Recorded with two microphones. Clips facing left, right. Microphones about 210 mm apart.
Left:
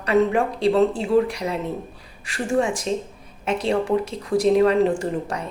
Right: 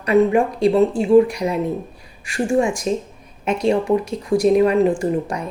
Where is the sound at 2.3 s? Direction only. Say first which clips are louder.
Right 3 dB; 15° right (ahead or behind).